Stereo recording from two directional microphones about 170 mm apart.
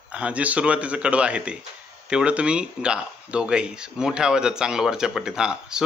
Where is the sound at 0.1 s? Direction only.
5° right (ahead or behind).